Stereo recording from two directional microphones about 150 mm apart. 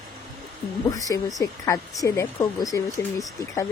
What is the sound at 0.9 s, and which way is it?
Speech, 20° left (ahead or behind).